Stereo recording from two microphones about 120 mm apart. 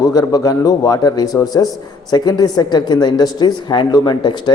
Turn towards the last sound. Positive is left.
turn(degrees=35)  # may be behind; listen again after turning